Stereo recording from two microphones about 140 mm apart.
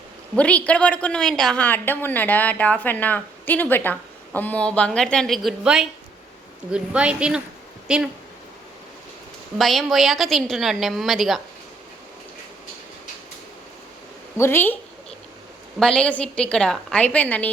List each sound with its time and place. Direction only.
0.3 s a woman's voice: 10° left (ahead or behind); by 8.1 s 5° right (ahead or behind)
9.6 s a woman's voice: centre (ahead or behind)
14.3 s a woman's voice: 15° left (ahead or behind)
15.8 s a woman's voice: 5° left (ahead or behind)